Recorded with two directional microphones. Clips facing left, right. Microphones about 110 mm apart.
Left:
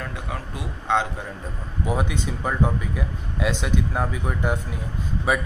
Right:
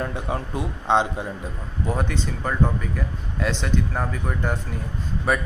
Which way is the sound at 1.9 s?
10° left (ahead or behind).